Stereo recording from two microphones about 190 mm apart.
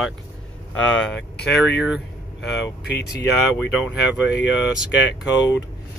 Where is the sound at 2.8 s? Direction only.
60° left (ahead or behind).